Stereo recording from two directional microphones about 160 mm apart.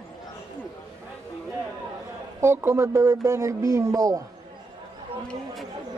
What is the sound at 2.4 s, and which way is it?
Speech, 15° right (ahead or behind).